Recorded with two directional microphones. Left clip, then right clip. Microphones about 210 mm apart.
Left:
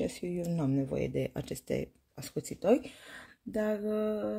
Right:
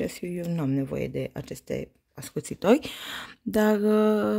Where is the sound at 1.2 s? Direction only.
10° right (ahead or behind).